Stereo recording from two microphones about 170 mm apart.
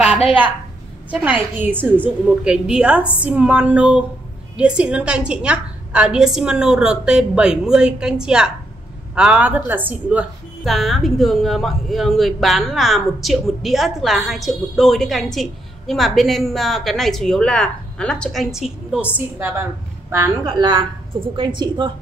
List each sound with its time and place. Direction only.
1.2 s a woman's voice: 10° right (ahead or behind); by 21.9 s 25° right (ahead or behind)